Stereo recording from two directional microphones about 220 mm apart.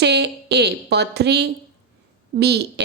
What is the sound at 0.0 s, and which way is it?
A woman's voice, 50° right (ahead or behind).